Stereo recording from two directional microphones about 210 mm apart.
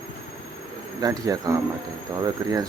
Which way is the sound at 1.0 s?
15° right (ahead or behind).